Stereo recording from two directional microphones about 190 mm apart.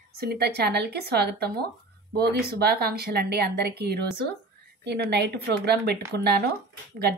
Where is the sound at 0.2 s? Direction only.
55° right (ahead or behind).